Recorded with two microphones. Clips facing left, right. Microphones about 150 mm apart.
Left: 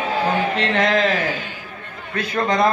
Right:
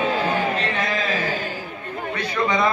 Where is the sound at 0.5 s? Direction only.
90° left.